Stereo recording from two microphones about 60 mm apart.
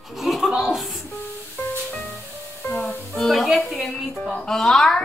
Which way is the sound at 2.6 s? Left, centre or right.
Left.